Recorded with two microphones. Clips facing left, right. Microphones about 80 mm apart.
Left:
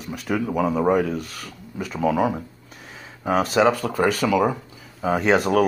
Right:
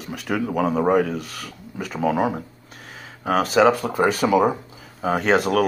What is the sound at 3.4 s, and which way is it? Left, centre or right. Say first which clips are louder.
Speech: right 2 dB; centre.